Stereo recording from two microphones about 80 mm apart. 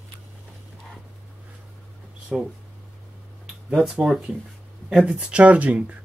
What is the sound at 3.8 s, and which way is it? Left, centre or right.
Speech, centre.